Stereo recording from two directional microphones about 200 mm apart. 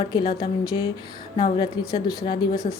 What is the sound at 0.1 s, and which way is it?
Speech, 20° left (ahead or behind).